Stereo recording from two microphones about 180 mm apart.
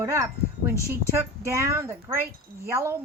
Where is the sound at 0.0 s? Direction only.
15° right (ahead or behind).